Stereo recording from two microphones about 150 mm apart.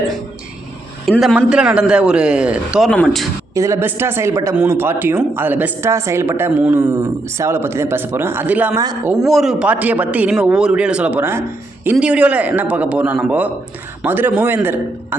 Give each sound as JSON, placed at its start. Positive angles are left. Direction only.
{"t": 1.0, "sound": "speech", "side_deg": 5}
{"t": 1.4, "sound": "a woman's voice", "side_deg": -10}
{"t": 3.5, "sound": "a woman's voice", "side_deg": -20}